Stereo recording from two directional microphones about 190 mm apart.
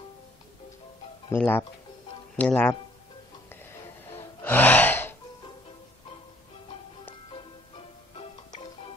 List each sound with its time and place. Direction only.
1.3 s speech: 10° left (ahead or behind)
3.4 s gasp: 10° left (ahead or behind)
7.2 s music: 30° left (ahead or behind)